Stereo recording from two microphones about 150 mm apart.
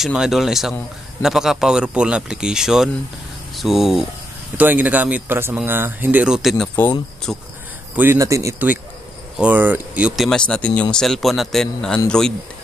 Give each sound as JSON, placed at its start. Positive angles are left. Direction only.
{"t": 0.0, "sound": "speech", "side_deg": -5}
{"t": 7.9, "sound": "speech", "side_deg": -15}